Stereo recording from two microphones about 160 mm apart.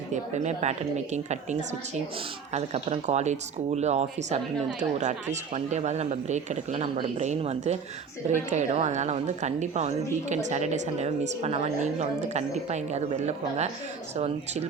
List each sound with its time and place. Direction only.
0.1 s speech: 45° right (ahead or behind)